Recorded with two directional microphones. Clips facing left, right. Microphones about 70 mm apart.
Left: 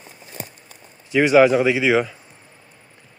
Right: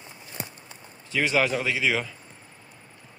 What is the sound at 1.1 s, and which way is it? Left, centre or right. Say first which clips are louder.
A man's voice: left 10 dB; centre.